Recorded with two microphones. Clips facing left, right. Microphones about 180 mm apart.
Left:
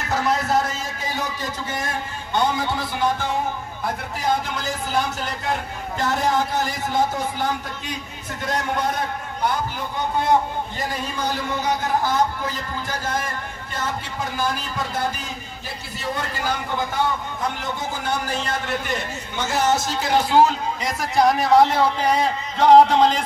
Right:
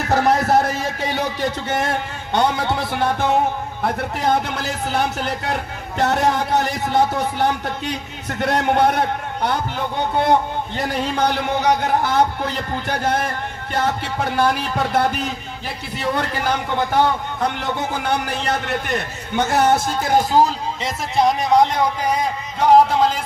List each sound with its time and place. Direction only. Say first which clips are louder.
0.1 s a man's voice: right 5 dB; 65° right (ahead or behind); by 20.5 s 40° right (ahead or behind)
20.8 s a man's voice: even; 20° right (ahead or behind)